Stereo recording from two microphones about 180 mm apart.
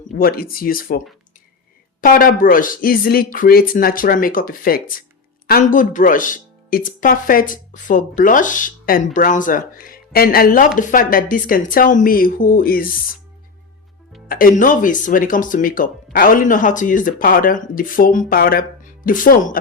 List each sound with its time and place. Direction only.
0.2 s speech: 55° left (ahead or behind)
14.3 s speech: 50° left (ahead or behind)